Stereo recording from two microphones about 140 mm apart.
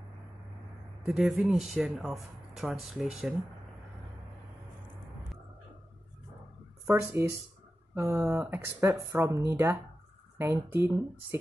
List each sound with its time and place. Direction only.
1.0 s speech: centre (ahead or behind)
6.9 s speech: 20° right (ahead or behind)